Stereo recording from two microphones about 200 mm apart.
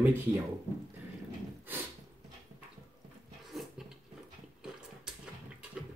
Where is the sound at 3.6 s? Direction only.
Centre (ahead or behind).